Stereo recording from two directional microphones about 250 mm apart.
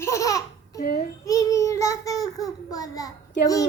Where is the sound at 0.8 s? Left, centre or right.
Left.